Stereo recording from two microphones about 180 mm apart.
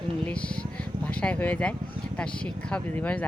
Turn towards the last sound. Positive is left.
turn(degrees=5)  # may be behind; listen again after turning